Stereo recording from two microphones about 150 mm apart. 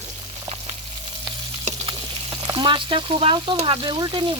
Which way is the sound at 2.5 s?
30° right (ahead or behind).